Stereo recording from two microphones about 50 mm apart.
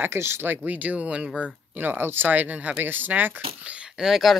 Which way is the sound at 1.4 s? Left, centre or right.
Right.